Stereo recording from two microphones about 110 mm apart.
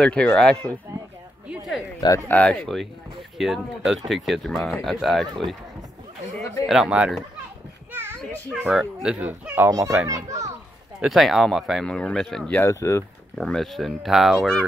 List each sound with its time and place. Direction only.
0.0 s speech: 10° left (ahead or behind)
2.1 s speech: 15° left (ahead or behind)
6.3 s speech: centre (ahead or behind)
8.6 s speech: 5° right (ahead or behind)
9.7 s a child's voice: 30° right (ahead or behind)
11.0 s speech: centre (ahead or behind)
12.5 s speech: 25° left (ahead or behind)
13.4 s speech: 5° left (ahead or behind)